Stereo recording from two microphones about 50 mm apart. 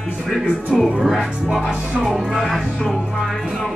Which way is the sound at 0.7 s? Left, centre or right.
Centre.